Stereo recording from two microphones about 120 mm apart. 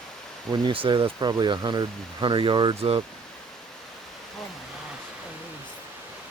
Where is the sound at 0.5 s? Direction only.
45° right (ahead or behind).